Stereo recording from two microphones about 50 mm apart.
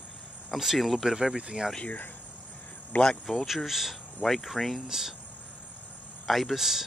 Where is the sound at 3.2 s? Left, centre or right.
Centre.